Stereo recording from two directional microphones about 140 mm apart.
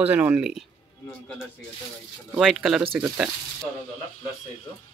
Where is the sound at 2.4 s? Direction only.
Centre (ahead or behind).